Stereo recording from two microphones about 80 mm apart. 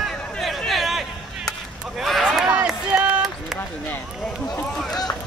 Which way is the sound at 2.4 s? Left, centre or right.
Centre.